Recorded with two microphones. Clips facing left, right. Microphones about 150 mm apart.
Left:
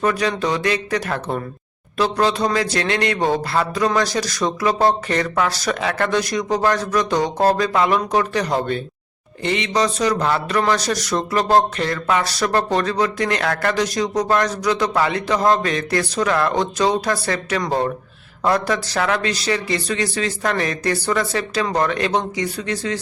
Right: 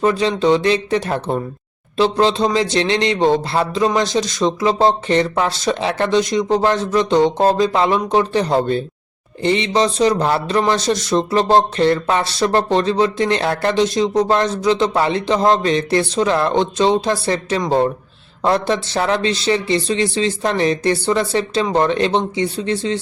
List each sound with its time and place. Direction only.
0.0 s speech: 25° right (ahead or behind)